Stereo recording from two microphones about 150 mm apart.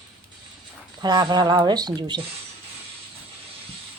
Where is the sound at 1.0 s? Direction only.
30° right (ahead or behind).